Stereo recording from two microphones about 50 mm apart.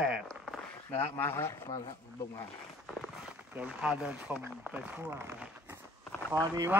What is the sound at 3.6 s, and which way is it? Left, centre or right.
Speech, right.